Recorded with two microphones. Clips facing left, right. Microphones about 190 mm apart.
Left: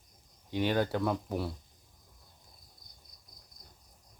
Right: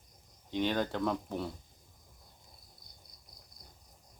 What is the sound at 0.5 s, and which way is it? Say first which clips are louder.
Speech: left 2 dB; 10° left (ahead or behind).